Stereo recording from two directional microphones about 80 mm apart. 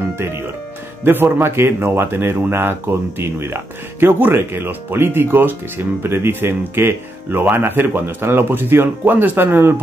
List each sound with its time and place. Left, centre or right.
1.0 s speech: right